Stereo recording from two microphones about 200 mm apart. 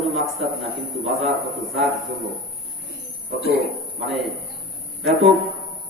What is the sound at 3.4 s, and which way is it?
Speech, 50° left (ahead or behind).